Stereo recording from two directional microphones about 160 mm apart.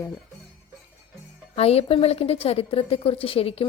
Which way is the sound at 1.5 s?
40° left (ahead or behind).